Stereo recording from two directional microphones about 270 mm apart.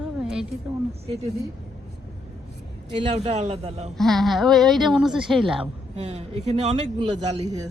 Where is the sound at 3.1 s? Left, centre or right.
Right.